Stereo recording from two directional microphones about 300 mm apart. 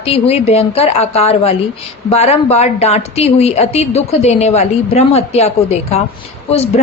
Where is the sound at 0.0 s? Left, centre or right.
Centre.